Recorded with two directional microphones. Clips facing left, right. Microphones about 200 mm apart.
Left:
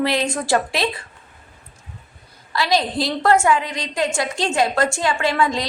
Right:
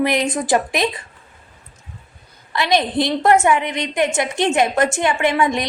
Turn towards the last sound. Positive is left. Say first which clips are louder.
# right 2 dB
turn(degrees=-20)  # may be behind; listen again after turning